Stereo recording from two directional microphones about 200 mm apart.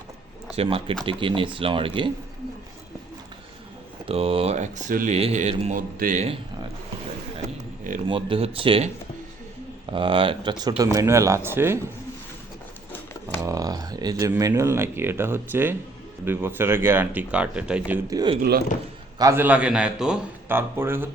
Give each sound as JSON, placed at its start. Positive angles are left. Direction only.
{"t": 0.5, "sound": "speech", "side_deg": -30}
{"t": 4.0, "sound": "speech", "side_deg": -30}
{"t": 8.0, "sound": "a man's voice", "side_deg": -25}
{"t": 13.4, "sound": "a man's voice", "side_deg": -20}
{"t": 18.1, "sound": "a man's voice", "side_deg": -20}